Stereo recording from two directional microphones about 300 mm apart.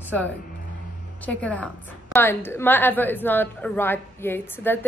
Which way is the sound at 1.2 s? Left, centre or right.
Centre.